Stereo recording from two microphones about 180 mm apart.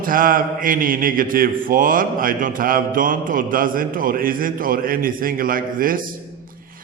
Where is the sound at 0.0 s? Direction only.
50° right (ahead or behind).